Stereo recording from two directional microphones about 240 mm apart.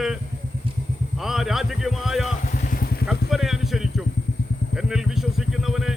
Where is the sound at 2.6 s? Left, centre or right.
Left.